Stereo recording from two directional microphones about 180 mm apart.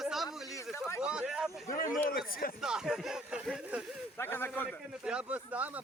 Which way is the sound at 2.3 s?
55° left (ahead or behind).